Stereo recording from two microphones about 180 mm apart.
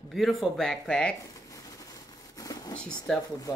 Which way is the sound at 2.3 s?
20° left (ahead or behind).